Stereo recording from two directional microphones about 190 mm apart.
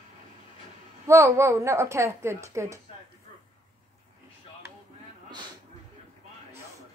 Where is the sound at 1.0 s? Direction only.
15° right (ahead or behind).